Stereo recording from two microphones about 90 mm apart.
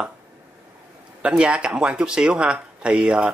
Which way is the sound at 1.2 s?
10° right (ahead or behind).